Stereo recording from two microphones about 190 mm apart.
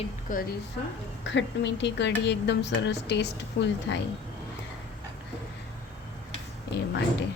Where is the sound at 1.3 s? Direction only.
70° left (ahead or behind).